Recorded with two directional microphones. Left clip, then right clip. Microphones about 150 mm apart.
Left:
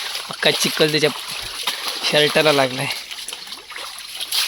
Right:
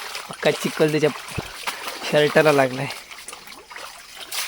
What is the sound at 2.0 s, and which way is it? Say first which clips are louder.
Pigeon: left 2 dB; 25° right (ahead or behind).